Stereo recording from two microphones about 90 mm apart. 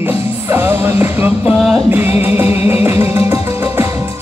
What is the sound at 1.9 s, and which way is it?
Music, 25° right (ahead or behind).